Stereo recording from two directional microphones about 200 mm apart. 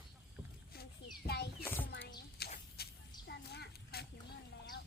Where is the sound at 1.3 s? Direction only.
55° left (ahead or behind).